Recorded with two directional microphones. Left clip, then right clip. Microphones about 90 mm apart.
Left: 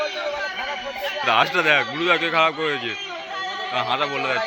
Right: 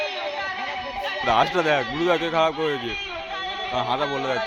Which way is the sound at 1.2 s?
50° right (ahead or behind).